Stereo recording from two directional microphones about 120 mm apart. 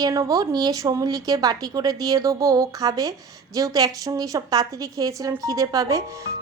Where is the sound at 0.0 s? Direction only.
30° right (ahead or behind).